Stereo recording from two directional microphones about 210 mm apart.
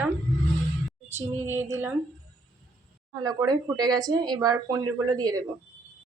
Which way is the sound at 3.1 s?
20° right (ahead or behind).